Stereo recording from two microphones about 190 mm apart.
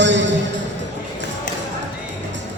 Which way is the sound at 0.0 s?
70° right (ahead or behind).